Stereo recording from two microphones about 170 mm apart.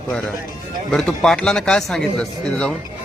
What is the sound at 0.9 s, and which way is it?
Speech, 5° left (ahead or behind).